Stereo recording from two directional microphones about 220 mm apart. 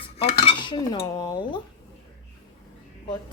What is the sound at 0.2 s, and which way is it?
A woman's voice, 25° left (ahead or behind).